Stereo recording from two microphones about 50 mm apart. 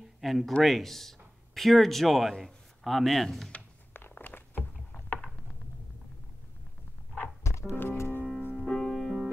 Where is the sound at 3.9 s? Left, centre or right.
Left.